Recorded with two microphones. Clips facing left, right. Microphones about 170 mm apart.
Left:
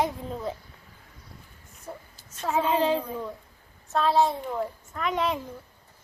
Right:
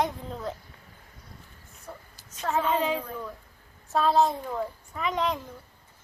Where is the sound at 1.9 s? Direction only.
20° left (ahead or behind).